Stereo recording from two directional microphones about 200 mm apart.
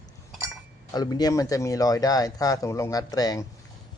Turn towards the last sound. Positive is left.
turn(degrees=20)  # may be behind; listen again after turning